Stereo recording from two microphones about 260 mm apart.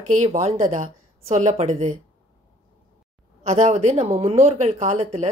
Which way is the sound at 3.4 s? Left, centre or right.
Right.